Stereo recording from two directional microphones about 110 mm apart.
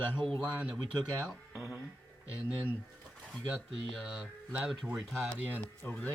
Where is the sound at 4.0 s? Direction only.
Centre (ahead or behind).